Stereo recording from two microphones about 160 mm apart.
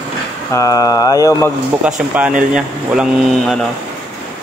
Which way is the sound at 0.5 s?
20° left (ahead or behind).